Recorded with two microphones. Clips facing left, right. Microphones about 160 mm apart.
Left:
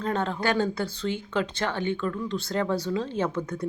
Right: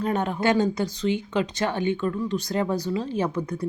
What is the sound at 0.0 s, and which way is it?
A woman's voice, 15° right (ahead or behind).